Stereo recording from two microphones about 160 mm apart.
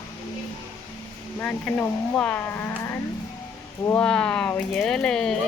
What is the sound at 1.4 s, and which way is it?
A child's voice, 10° left (ahead or behind).